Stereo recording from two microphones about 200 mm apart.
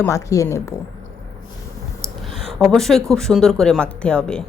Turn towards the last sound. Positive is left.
turn(degrees=5)  # may be behind; listen again after turning